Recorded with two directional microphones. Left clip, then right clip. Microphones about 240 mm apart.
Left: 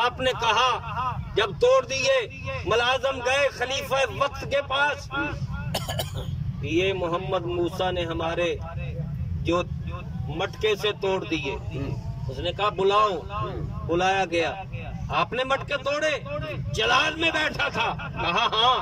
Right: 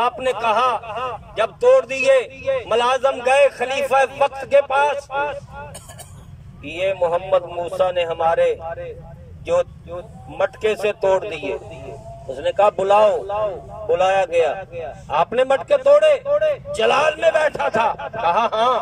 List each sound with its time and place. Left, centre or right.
0.2 s a man's voice: centre
0.7 s a man's voice: right
6.7 s a man's voice: right
10.4 s a man's voice: right